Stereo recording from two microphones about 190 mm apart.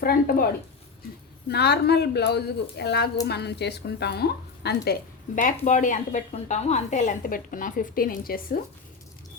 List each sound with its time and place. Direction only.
0.0 s a woman's voice: 50° left (ahead or behind)
1.5 s a woman's voice: 60° left (ahead or behind)
5.3 s a woman's voice: 45° left (ahead or behind)